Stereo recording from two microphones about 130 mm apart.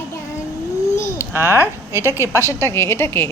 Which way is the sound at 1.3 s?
20° right (ahead or behind).